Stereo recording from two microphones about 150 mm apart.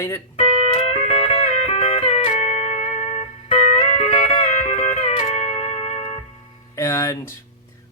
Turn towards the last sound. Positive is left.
turn(degrees=20)  # may be behind; listen again after turning